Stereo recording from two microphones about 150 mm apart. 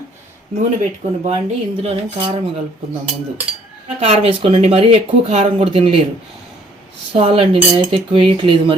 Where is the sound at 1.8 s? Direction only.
40° right (ahead or behind).